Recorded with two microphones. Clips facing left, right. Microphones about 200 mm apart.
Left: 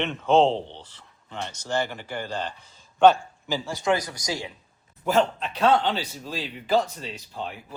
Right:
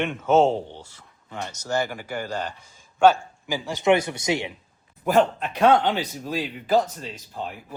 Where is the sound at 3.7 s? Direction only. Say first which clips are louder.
Right 6 dB; 20° right (ahead or behind).